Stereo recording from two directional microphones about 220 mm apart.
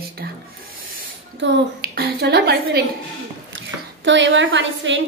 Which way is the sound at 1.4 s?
45° right (ahead or behind).